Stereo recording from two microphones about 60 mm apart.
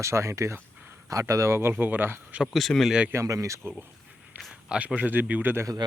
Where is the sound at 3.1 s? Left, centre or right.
Right.